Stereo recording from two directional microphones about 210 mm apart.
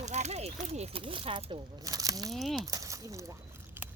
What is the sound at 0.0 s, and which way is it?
Speech, 30° right (ahead or behind).